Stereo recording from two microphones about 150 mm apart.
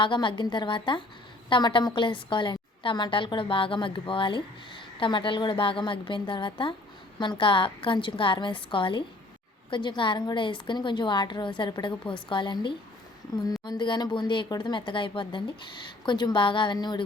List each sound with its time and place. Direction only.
0.0 s a woman's voice: 35° left (ahead or behind)